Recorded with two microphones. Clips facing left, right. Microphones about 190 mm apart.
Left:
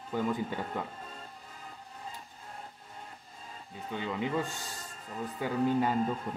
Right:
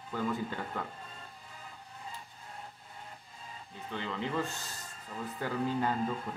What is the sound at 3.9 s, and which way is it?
A man's voice, 10° left (ahead or behind).